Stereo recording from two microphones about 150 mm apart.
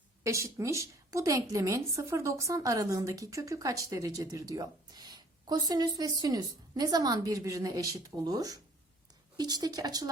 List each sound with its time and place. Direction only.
0.2 s a woman's voice: 20° right (ahead or behind)